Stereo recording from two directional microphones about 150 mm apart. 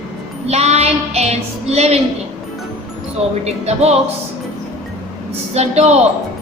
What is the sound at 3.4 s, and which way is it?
Child singing, 45° right (ahead or behind).